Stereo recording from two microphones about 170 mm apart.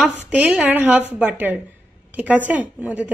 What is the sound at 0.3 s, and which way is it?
Speech, 10° right (ahead or behind).